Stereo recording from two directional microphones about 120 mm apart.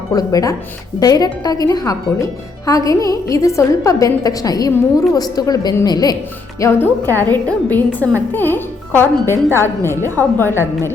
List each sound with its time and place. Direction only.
0.1 s a woman's voice: 30° left (ahead or behind)
6.6 s a woman's voice: 15° left (ahead or behind)